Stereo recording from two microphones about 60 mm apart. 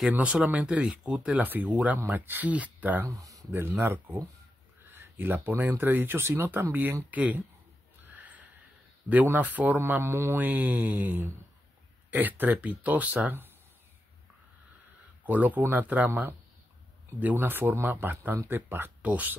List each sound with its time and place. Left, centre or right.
0.2 s speech: right
3.1 s speech: right
3.5 s speech: right
4.9 s a sound: right
5.5 s speech: right
8.0 s a sound: right
9.1 s speech: right
9.8 s speech: right
10.3 s speech: right
15.2 s speech: right
19.0 s speech: right